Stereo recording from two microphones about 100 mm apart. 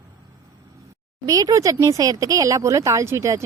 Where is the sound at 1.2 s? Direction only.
35° right (ahead or behind).